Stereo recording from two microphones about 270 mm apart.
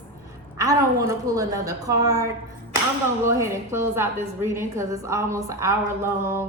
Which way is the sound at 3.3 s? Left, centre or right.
Centre.